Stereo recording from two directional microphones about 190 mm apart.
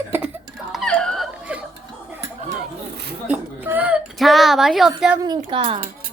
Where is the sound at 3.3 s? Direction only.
10° right (ahead or behind).